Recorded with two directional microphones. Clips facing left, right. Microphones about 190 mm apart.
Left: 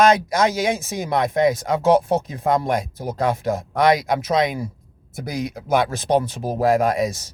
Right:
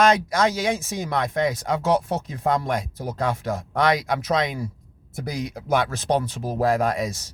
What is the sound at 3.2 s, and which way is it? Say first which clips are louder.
Speech: left 4 dB; 20° left (ahead or behind).